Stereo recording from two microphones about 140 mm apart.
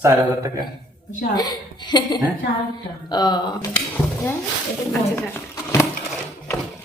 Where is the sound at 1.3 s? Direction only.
30° left (ahead or behind).